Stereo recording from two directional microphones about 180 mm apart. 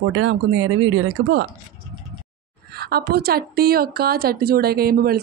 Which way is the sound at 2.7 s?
60° right (ahead or behind).